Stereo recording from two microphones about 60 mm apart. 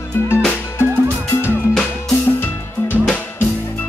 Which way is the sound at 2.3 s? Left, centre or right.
Left.